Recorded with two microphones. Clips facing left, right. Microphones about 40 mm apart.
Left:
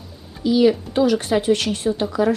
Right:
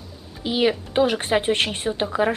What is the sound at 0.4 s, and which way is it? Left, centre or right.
Speech, right.